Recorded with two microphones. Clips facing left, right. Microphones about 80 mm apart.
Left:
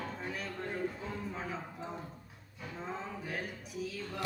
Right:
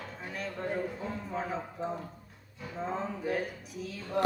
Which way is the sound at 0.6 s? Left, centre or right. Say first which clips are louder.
Right 5 dB; right.